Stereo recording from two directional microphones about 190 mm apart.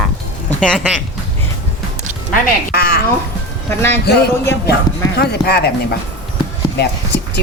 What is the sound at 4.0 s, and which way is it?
Speech, 55° left (ahead or behind).